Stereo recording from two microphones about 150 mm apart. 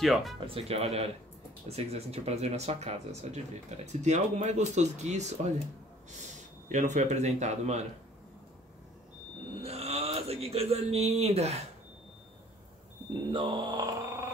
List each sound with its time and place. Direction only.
0.0 s speech: centre (ahead or behind)
0.6 s speech: 40° right (ahead or behind)
6.7 s speech: 55° right (ahead or behind)
9.6 s speech: 45° right (ahead or behind)
13.1 s speech: 35° right (ahead or behind)